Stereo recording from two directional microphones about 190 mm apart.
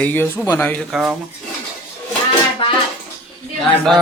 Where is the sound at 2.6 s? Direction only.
30° left (ahead or behind).